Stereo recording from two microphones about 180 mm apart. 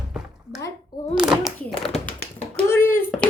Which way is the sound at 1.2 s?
5° right (ahead or behind).